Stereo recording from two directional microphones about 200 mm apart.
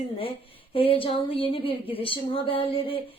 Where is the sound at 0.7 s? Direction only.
25° left (ahead or behind).